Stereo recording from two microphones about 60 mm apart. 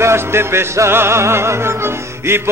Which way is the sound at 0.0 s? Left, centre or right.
Right.